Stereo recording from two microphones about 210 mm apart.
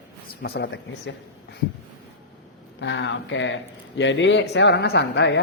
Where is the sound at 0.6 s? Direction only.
60° left (ahead or behind).